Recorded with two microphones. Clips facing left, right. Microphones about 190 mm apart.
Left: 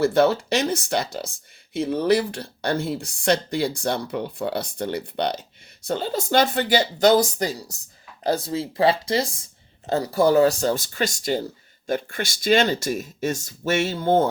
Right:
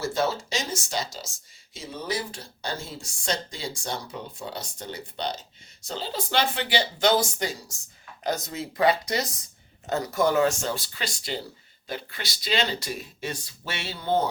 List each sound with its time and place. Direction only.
0.0 s speech: 60° left (ahead or behind)
5.9 s speech: 50° left (ahead or behind)